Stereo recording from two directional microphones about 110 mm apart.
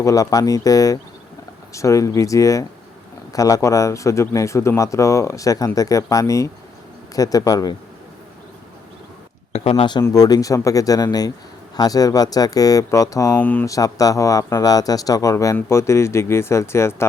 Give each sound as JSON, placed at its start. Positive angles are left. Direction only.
{"t": 0.0, "sound": "speech", "side_deg": 30}
{"t": 9.5, "sound": "a sound", "side_deg": 65}
{"t": 10.0, "sound": "speech", "side_deg": 35}
{"t": 13.4, "sound": "speech", "side_deg": 15}
{"t": 13.7, "sound": "speech", "side_deg": 30}